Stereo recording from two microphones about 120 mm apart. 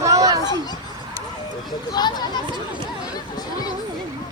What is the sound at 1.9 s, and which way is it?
Speech, 35° left (ahead or behind).